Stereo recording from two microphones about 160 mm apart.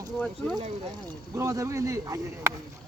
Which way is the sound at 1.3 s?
20° right (ahead or behind).